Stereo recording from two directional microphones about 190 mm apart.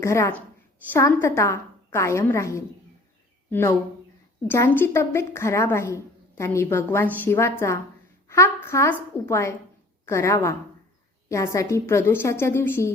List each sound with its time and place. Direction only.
0.0 s a woman's voice: 15° left (ahead or behind)